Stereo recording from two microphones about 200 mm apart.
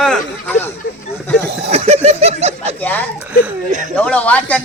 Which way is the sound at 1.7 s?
30° right (ahead or behind).